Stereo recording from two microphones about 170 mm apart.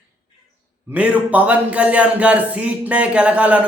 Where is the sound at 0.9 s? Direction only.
10° right (ahead or behind).